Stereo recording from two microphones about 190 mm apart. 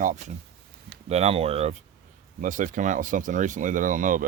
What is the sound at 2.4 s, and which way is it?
Speech, 45° right (ahead or behind).